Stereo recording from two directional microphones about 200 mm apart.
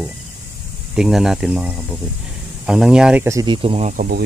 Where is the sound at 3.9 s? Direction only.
45° right (ahead or behind).